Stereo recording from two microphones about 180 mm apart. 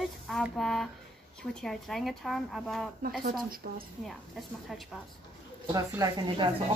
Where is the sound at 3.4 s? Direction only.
55° right (ahead or behind).